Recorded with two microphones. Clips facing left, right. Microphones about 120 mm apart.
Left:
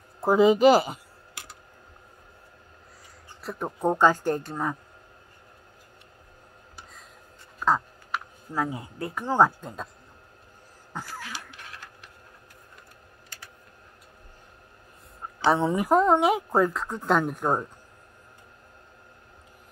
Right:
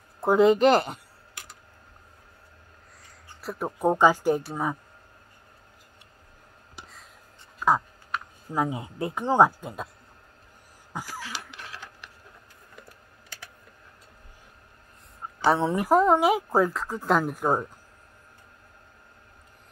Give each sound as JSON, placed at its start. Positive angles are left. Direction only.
{"t": 0.2, "sound": "speech", "side_deg": 0}
{"t": 3.4, "sound": "speech", "side_deg": -5}
{"t": 8.5, "sound": "speech", "side_deg": -20}
{"t": 9.6, "sound": "speech", "side_deg": -10}
{"t": 10.9, "sound": "a sound", "side_deg": -10}
{"t": 11.3, "sound": "clock", "side_deg": -80}
{"t": 15.4, "sound": "speech", "side_deg": 0}